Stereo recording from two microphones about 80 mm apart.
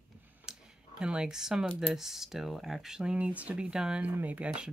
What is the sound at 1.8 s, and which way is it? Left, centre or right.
Speech, centre.